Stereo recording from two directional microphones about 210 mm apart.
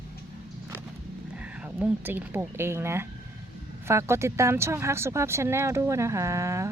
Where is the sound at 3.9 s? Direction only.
15° right (ahead or behind).